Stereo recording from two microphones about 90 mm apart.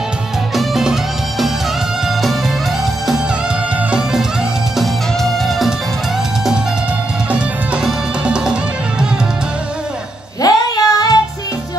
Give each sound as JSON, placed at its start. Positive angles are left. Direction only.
{"t": 0.6, "sound": "music", "side_deg": -5}
{"t": 4.7, "sound": "music", "side_deg": 0}
{"t": 7.2, "sound": "music", "side_deg": -15}
{"t": 10.4, "sound": "a sound", "side_deg": 45}